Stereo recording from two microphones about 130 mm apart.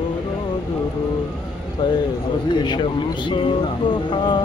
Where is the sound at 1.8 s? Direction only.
35° left (ahead or behind).